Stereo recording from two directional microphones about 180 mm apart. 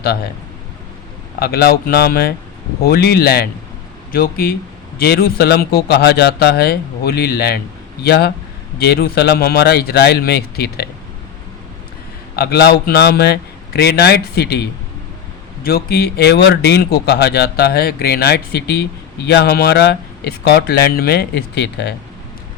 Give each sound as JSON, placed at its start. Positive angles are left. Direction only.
{"t": 1.4, "sound": "speech", "side_deg": 60}
{"t": 12.4, "sound": "speech", "side_deg": 60}